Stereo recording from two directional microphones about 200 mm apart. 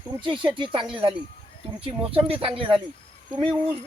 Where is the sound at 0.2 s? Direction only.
25° right (ahead or behind).